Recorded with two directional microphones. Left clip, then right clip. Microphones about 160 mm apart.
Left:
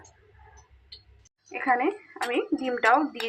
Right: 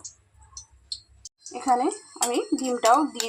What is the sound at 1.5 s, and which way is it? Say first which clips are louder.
A woman's voice: right 1 dB; 25° right (ahead or behind).